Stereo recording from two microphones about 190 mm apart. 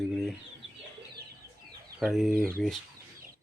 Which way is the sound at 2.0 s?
Centre (ahead or behind).